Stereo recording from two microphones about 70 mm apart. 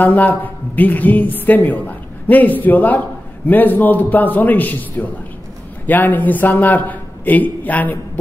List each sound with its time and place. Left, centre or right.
0.0 s a woman's voice: left